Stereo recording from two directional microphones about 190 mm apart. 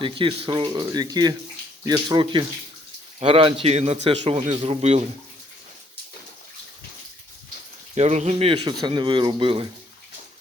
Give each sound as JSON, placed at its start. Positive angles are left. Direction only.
{"t": 0.0, "sound": "a man's voice", "side_deg": -25}
{"t": 7.9, "sound": "a man's voice", "side_deg": -35}